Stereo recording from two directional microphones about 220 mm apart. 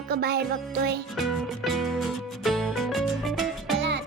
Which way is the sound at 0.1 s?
45° right (ahead or behind).